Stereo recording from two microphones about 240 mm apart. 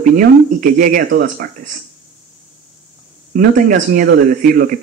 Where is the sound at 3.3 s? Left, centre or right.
Right.